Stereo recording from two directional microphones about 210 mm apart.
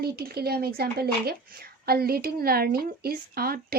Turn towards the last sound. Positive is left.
turn(degrees=-45)  # may be behind; listen again after turning